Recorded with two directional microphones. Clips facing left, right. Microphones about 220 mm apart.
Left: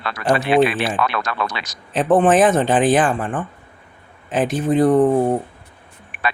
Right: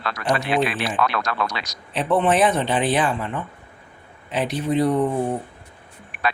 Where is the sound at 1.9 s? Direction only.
45° left (ahead or behind).